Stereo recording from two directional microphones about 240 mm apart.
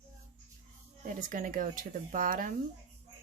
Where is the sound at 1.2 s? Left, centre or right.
Right.